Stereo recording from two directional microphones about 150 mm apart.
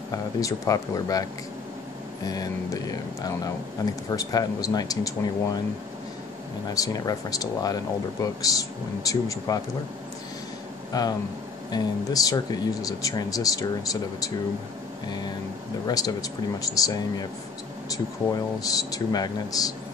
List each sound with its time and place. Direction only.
0.1 s speech: 25° left (ahead or behind)
2.2 s speech: 25° left (ahead or behind)
6.7 s speech: 25° left (ahead or behind)
10.9 s speech: 25° left (ahead or behind)